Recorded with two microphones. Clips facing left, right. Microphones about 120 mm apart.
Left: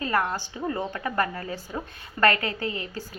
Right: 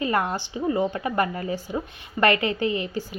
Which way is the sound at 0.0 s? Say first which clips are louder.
Right 2 dB; 20° right (ahead or behind).